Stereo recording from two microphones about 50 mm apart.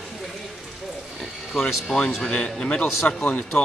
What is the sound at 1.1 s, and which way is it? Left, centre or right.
Speech, centre.